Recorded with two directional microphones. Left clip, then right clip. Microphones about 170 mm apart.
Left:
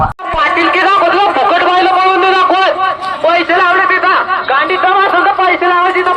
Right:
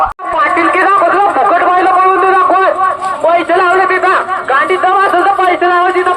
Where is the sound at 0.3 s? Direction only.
40° right (ahead or behind).